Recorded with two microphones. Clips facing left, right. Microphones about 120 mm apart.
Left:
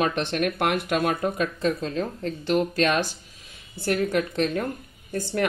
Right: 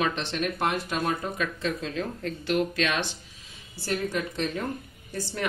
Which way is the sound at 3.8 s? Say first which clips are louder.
Left 5 dB; 60° left (ahead or behind).